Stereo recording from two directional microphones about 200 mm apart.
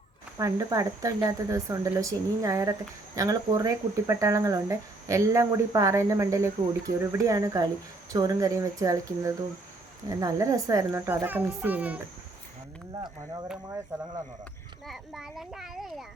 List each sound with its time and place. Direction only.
0.3 s speech: 15° right (ahead or behind)
13.9 s speech: 15° right (ahead or behind)
14.8 s a child's voice: centre (ahead or behind)